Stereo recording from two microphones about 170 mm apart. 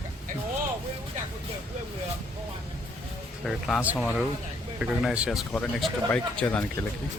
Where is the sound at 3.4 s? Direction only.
Centre (ahead or behind).